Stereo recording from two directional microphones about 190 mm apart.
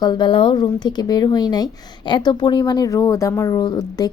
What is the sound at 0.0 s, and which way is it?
Speech, 25° left (ahead or behind).